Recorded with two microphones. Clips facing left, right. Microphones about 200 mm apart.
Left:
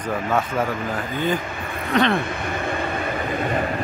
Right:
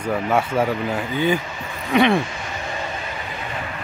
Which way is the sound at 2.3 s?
55° left (ahead or behind).